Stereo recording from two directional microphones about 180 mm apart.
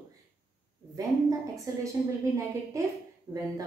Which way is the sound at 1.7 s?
15° right (ahead or behind).